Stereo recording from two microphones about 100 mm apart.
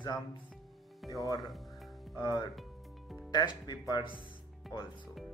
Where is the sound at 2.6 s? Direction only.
Centre (ahead or behind).